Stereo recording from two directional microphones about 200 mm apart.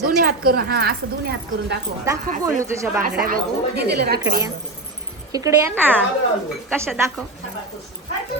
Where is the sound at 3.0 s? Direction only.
45° right (ahead or behind).